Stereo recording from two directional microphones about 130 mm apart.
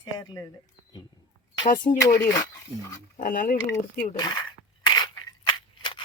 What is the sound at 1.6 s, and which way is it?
Speech, 85° left.